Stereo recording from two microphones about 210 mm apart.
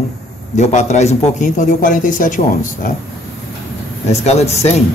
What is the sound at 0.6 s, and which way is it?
Speech, 35° left (ahead or behind).